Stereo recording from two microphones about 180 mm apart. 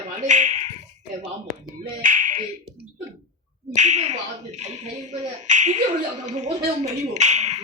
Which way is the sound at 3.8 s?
40° right (ahead or behind).